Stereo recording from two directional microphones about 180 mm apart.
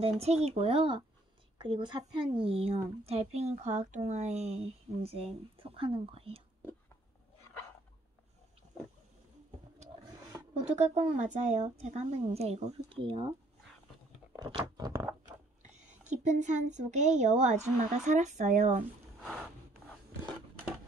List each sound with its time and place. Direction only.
0.0 s speech: 35° right (ahead or behind)
10.6 s speech: 40° right (ahead or behind)
14.5 s speech: 20° right (ahead or behind)
15.7 s a sound: 40° right (ahead or behind)
16.7 s speech: 40° right (ahead or behind)
19.2 s a sound: centre (ahead or behind)